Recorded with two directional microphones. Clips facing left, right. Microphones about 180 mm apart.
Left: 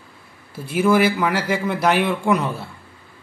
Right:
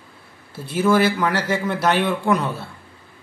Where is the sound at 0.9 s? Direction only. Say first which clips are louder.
Even; 10° left (ahead or behind).